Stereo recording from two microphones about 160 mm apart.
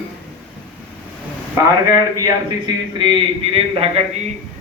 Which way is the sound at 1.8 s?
20° right (ahead or behind).